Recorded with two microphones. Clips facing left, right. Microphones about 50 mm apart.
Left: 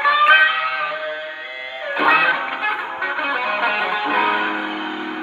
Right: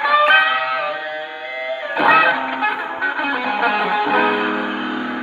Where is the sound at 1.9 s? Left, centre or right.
Centre.